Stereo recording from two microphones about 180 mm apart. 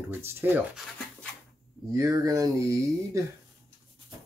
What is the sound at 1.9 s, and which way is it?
Speech, 20° right (ahead or behind).